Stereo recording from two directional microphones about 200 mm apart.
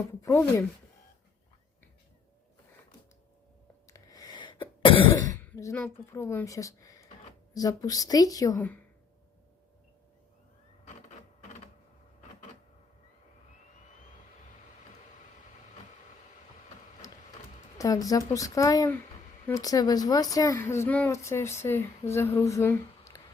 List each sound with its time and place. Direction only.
0.2 s a woman's voice: 15° left (ahead or behind)
3.8 s throat clearing: 15° left (ahead or behind)
5.4 s a sound: 15° left (ahead or behind)
6.1 s a woman's voice: 15° left (ahead or behind)
17.0 s a sound: 15° left (ahead or behind)
17.7 s a woman's voice: 15° left (ahead or behind)